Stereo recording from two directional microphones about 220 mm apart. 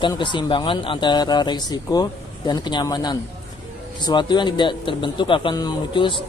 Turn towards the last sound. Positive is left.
turn(degrees=20)  # may be behind; listen again after turning